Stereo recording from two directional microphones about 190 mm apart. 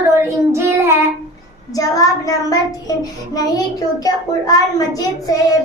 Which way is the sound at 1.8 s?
20° left (ahead or behind).